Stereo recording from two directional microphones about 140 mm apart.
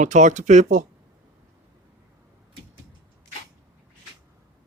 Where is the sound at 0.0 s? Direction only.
60° right (ahead or behind).